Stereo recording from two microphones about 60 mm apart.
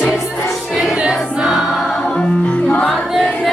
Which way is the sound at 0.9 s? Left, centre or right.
Centre.